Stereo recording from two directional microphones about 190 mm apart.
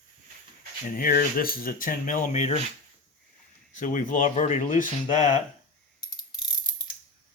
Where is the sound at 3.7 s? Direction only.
45° left (ahead or behind).